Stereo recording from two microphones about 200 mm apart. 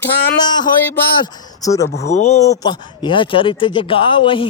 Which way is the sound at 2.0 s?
35° left (ahead or behind).